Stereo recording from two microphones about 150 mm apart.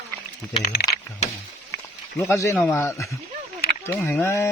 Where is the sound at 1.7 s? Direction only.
20° left (ahead or behind).